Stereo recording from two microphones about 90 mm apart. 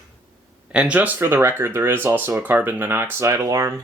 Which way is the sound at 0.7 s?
15° right (ahead or behind).